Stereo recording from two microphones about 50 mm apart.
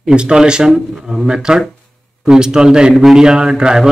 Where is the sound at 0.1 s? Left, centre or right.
Centre.